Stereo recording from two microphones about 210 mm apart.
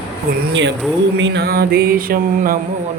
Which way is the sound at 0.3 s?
45° right (ahead or behind).